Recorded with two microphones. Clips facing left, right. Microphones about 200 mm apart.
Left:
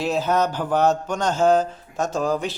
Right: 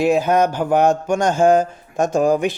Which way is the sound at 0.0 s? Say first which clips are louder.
Right 6 dB; 15° right (ahead or behind).